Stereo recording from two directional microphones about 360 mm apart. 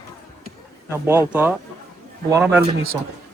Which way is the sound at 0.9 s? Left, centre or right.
Centre.